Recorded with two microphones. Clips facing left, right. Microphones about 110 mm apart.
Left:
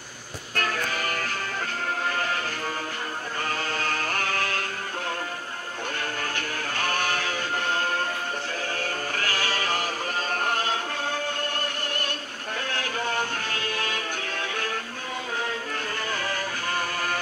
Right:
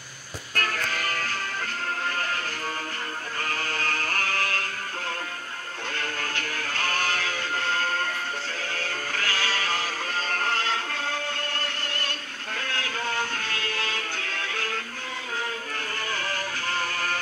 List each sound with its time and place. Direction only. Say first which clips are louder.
0.6 s music: left 1 dB; 20° left (ahead or behind)
3.3 s music: left 2 dB; 25° left (ahead or behind)
5.9 s music: even; 25° left (ahead or behind)
12.6 s vehicle: left 1 dB; 20° left (ahead or behind)
13.6 s music: left 2 dB; 20° left (ahead or behind)
16.1 s music: left 1 dB; 15° left (ahead or behind)